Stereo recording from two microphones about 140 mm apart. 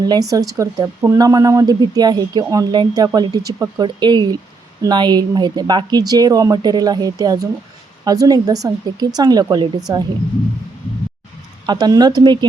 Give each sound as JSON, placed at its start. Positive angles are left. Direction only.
{"t": 0.0, "sound": "speech", "side_deg": -25}
{"t": 11.6, "sound": "speech", "side_deg": -30}